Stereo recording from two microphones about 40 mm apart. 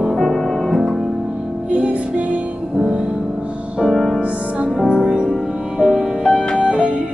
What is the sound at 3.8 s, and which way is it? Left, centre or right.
Music, centre.